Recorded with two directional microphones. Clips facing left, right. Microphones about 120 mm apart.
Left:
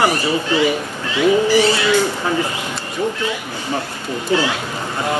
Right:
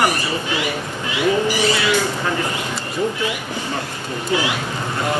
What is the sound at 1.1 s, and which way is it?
Speech, 15° right (ahead or behind).